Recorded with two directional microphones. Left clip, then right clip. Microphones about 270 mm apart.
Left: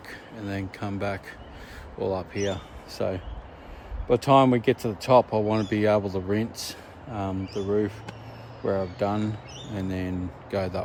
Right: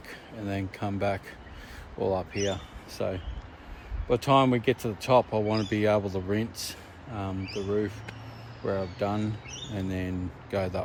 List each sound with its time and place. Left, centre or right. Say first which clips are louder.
0.1 s speech: even; centre